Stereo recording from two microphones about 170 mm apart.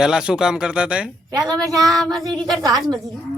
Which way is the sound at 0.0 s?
5° right (ahead or behind).